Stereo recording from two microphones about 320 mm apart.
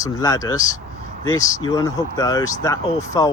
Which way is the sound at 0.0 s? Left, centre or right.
Centre.